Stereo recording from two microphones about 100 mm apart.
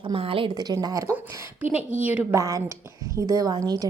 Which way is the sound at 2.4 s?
30° right (ahead or behind).